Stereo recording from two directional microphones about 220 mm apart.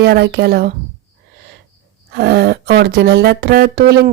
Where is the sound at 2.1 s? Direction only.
50° right (ahead or behind).